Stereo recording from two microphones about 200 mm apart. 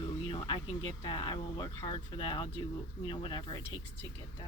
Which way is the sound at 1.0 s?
25° left (ahead or behind).